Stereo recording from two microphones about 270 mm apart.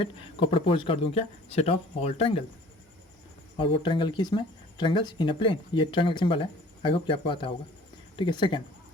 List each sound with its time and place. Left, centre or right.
0.0 s speech: centre
3.6 s speech: centre